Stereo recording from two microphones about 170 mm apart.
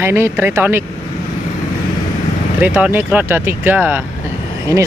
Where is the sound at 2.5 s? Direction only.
10° right (ahead or behind).